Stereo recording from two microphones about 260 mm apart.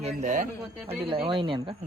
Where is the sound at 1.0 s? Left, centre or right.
Centre.